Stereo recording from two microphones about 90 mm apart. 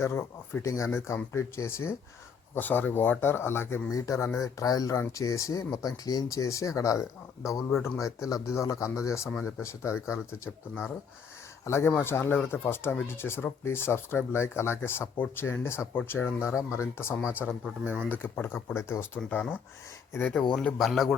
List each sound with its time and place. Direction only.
0.0 s speech: 30° left (ahead or behind)
17.4 s speech: 15° right (ahead or behind)
18.0 s speech: 15° left (ahead or behind)
20.5 s speech: 10° left (ahead or behind)